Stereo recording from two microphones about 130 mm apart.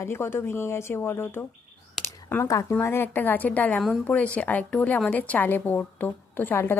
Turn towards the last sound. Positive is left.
turn(degrees=15)  # may be behind; listen again after turning